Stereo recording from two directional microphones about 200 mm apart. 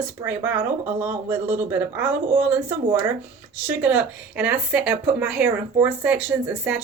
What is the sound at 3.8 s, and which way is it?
Speech, 5° right (ahead or behind).